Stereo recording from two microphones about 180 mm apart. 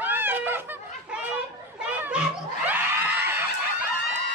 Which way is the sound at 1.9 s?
10° right (ahead or behind).